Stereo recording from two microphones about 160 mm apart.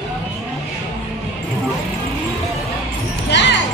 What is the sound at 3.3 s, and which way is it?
Music, 90° left.